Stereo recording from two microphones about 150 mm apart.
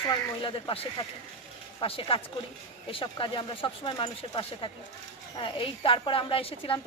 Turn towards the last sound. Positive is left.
turn(degrees=35)  # may be behind; listen again after turning